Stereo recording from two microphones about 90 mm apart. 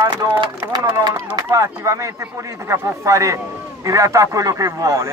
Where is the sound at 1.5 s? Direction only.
35° right (ahead or behind).